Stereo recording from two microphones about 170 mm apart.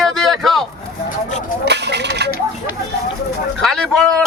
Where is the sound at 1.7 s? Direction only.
80° right.